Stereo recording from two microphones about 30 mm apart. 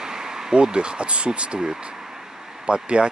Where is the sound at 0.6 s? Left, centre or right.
Right.